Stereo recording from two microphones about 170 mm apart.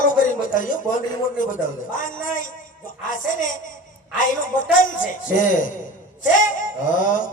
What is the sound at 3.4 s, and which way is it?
Speech, 50° left (ahead or behind).